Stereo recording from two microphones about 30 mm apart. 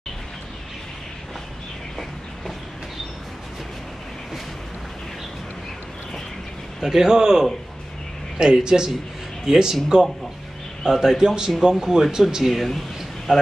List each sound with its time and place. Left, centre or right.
6.8 s speech: centre
10.8 s speech: centre
12.5 s speech: centre
13.3 s speech: right